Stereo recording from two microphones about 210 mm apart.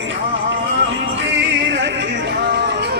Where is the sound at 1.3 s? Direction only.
55° right (ahead or behind).